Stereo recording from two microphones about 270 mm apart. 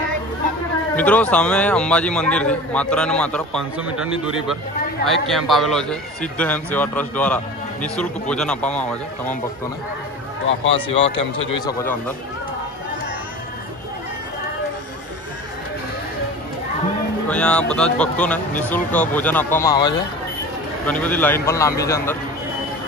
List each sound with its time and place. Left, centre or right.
0.9 s a man's voice: centre
10.4 s speech: left
17.3 s a man's voice: centre